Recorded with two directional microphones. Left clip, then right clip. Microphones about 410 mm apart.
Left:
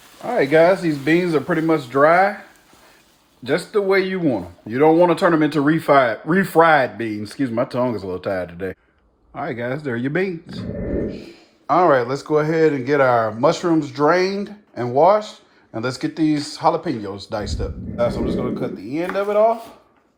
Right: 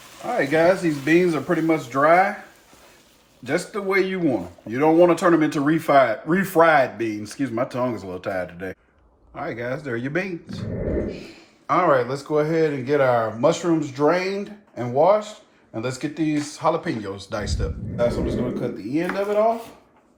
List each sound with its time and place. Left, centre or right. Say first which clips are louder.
0.3 s speech: left 4 dB; left
3.4 s speech: left 5 dB; left
11.6 s speech: left 3 dB; centre